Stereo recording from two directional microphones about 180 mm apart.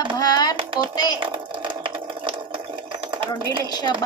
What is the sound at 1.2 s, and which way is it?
Rattle, 25° right (ahead or behind).